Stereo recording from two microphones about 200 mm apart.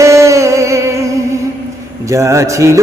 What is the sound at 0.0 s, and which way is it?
Music, 15° right (ahead or behind).